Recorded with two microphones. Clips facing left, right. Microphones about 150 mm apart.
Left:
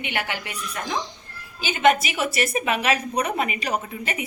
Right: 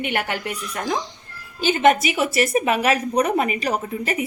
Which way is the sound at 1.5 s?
45° right (ahead or behind).